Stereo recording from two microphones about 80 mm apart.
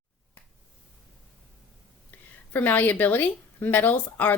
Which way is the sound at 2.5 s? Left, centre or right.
Left.